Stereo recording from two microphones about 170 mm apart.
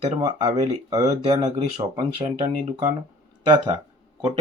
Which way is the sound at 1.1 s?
35° right (ahead or behind).